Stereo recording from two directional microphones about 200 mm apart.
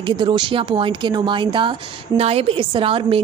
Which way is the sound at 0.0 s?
25° right (ahead or behind).